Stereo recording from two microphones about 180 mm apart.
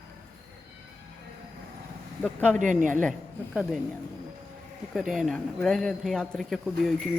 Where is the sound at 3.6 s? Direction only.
Centre (ahead or behind).